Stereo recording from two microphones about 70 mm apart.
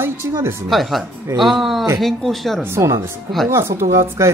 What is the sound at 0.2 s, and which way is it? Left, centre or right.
Speech, right.